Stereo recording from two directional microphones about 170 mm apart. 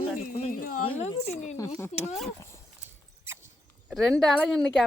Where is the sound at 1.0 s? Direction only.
40° left (ahead or behind).